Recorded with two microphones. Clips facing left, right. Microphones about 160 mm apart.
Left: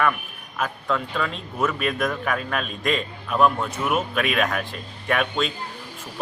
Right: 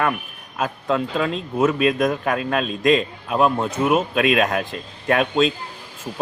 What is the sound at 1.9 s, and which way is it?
Speech, 20° right (ahead or behind).